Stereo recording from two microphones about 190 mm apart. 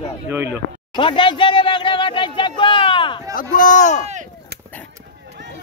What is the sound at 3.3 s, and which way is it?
Speech, 45° left (ahead or behind).